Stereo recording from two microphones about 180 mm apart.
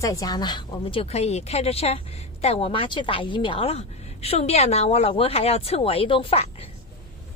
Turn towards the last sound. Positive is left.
turn(degrees=30)  # may be behind; listen again after turning